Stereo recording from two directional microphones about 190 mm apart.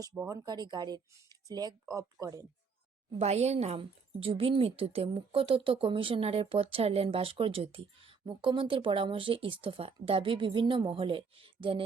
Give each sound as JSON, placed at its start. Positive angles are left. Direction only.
{"t": 0.0, "sound": "speech", "side_deg": -15}
{"t": 3.1, "sound": "speech", "side_deg": -35}